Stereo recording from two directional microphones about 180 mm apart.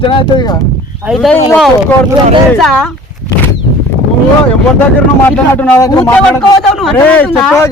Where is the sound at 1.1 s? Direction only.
5° left (ahead or behind).